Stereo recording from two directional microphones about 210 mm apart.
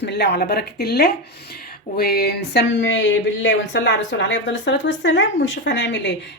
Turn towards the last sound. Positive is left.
turn(degrees=55)  # may be behind; listen again after turning